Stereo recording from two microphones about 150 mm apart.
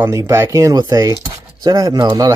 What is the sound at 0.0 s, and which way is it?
Speech, 20° right (ahead or behind).